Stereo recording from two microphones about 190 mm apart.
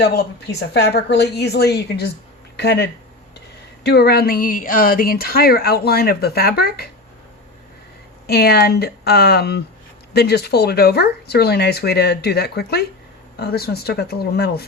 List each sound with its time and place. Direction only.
0.7 s speech: 60° left (ahead or behind)
8.3 s speech: 55° left (ahead or behind)